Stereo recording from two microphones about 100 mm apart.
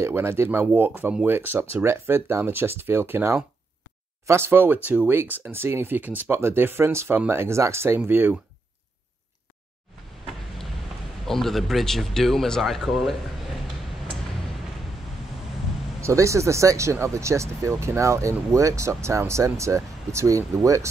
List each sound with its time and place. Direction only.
0.0 s speech: 25° right (ahead or behind)
11.2 s speech: 5° left (ahead or behind)
16.0 s speech: 30° right (ahead or behind)